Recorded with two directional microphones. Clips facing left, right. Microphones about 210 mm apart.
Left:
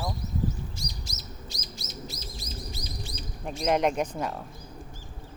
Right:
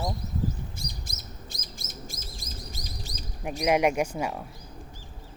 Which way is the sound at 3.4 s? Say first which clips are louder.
Right 2 dB; 10° right (ahead or behind).